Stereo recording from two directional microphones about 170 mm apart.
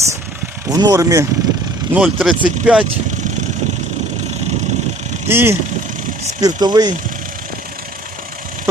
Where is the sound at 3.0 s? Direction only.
45° right (ahead or behind).